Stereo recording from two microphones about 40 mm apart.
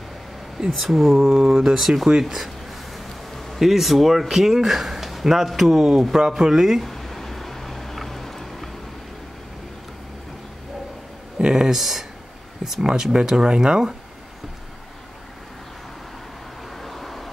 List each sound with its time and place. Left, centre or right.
0.7 s speech: centre
1.1 s speech: centre
6.5 s speech: centre
6.9 s music: centre
11.3 s speech: centre
11.8 s speech: centre
16.8 s vehicle: centre